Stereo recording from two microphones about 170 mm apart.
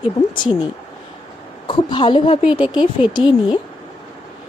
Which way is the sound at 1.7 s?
30° left (ahead or behind).